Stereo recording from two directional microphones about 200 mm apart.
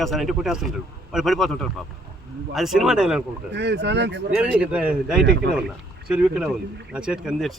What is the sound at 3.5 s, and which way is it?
Speech, 60° right (ahead or behind).